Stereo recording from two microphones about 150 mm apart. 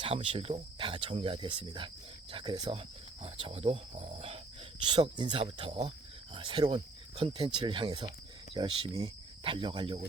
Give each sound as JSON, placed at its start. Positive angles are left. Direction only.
{"t": 0.0, "sound": "speech", "side_deg": -35}
{"t": 3.2, "sound": "speech", "side_deg": -40}
{"t": 4.9, "sound": "speech", "side_deg": -30}